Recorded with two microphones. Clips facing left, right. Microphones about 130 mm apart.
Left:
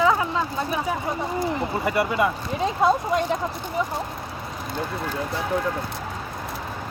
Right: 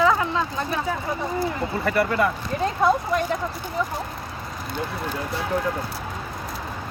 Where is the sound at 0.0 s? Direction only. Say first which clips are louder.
Even; 20° left (ahead or behind).